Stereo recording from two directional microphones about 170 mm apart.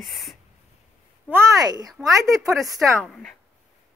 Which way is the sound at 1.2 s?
15° right (ahead or behind).